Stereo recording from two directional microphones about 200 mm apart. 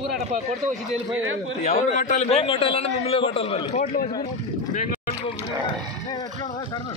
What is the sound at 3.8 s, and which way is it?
Speech, 45° left (ahead or behind).